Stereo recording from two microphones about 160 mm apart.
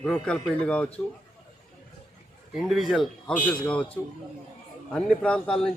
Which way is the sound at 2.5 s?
Centre (ahead or behind).